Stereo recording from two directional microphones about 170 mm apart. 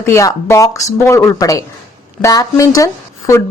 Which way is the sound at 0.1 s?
15° left (ahead or behind).